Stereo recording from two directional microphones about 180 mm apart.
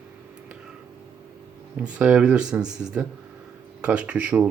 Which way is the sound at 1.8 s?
5° right (ahead or behind).